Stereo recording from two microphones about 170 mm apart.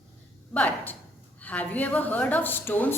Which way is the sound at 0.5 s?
10° left (ahead or behind).